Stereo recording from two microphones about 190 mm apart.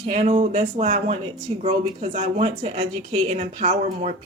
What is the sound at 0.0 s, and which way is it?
Speech, 35° right (ahead or behind).